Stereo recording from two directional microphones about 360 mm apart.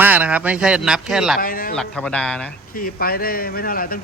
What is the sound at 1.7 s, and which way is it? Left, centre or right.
Speech, centre.